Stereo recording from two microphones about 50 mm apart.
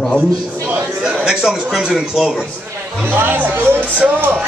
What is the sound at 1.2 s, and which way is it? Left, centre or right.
Speech, centre.